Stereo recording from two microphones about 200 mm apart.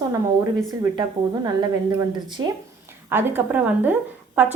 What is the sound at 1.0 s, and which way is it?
A woman's voice, 20° right (ahead or behind).